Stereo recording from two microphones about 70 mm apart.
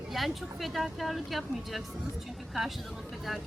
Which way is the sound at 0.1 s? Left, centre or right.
Centre.